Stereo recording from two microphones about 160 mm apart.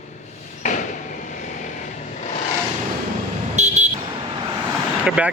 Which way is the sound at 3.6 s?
50° right (ahead or behind).